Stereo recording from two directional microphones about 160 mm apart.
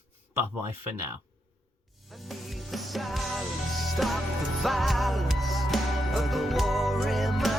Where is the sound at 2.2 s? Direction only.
Centre (ahead or behind).